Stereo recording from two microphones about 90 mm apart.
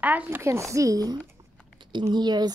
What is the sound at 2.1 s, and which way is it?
Speech, 50° right (ahead or behind).